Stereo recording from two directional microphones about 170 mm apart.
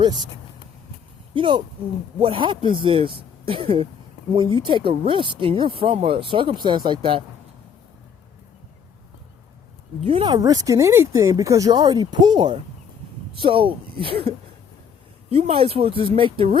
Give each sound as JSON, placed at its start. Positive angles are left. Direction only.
{"t": 1.3, "sound": "speech", "side_deg": -30}
{"t": 10.0, "sound": "speech", "side_deg": -35}